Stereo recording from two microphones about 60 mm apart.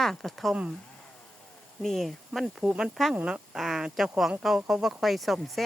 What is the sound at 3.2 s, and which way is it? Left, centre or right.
Speech, centre.